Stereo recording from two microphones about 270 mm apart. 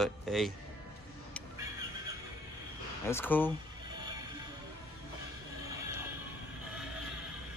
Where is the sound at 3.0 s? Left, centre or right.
Centre.